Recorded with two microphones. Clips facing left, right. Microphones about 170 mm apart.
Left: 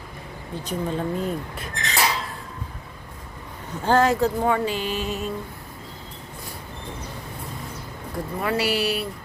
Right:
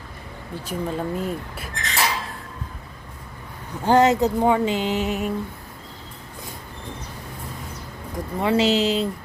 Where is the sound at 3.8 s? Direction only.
20° right (ahead or behind).